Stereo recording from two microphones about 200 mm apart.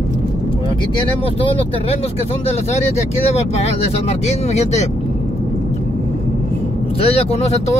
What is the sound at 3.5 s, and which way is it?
Speech, 30° left (ahead or behind).